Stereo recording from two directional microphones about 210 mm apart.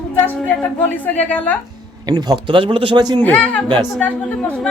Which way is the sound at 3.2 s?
10° left (ahead or behind).